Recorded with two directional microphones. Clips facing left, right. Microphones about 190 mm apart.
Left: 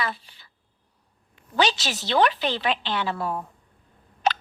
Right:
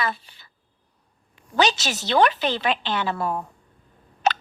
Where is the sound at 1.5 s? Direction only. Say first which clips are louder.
Right 2 dB; 45° right (ahead or behind).